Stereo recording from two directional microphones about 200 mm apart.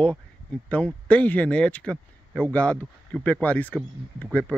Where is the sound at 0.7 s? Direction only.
5° left (ahead or behind).